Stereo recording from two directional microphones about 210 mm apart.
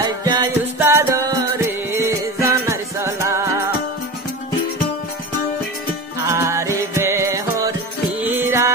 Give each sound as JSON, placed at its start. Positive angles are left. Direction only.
{"t": 0.0, "sound": "music", "side_deg": -20}
{"t": 2.4, "sound": "music", "side_deg": -15}
{"t": 6.2, "sound": "music", "side_deg": -15}